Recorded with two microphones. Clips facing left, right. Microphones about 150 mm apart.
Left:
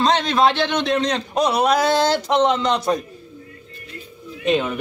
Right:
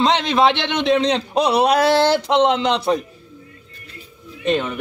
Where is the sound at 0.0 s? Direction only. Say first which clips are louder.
Right 1 dB; 20° right (ahead or behind).